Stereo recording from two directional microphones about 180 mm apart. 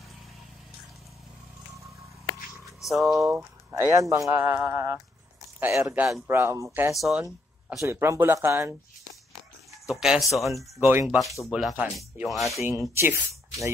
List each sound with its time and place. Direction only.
2.8 s speech: centre (ahead or behind)
3.2 s speech: 15° right (ahead or behind)
7.0 s speech: centre (ahead or behind)
7.9 s speech: 15° right (ahead or behind)
9.8 s speech: 5° right (ahead or behind)
10.5 s speech: 15° right (ahead or behind)
11.4 s speech: centre (ahead or behind)
12.6 s speech: 15° right (ahead or behind)